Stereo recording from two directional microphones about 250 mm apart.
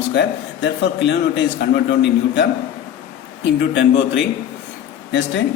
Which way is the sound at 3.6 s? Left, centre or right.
Left.